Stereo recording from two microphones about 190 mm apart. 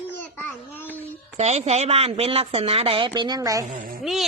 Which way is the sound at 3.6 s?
45° right (ahead or behind).